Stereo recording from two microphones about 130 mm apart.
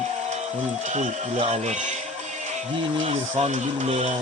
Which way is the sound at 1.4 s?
45° right (ahead or behind).